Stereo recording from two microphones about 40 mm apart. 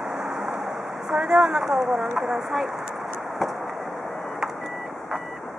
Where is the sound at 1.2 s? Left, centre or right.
Centre.